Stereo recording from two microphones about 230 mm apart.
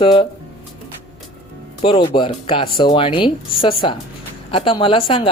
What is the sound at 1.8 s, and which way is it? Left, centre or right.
Speech, left.